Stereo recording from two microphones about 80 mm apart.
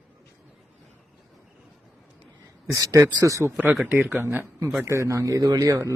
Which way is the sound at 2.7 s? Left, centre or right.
Right.